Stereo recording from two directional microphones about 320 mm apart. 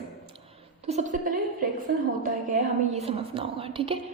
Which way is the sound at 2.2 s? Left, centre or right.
Right.